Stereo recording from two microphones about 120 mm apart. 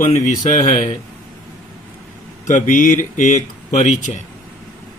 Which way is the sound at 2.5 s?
90° left.